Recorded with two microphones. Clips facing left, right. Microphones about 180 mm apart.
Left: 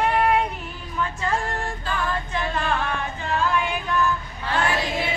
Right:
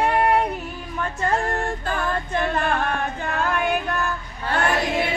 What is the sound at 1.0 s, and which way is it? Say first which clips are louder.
Female singing: right 2 dB; 50° right (ahead or behind).